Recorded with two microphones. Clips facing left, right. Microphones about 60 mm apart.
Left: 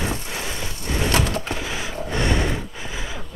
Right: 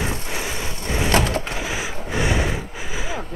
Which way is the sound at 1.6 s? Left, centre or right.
Centre.